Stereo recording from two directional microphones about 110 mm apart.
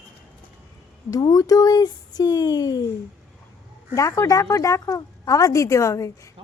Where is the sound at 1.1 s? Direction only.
35° left (ahead or behind).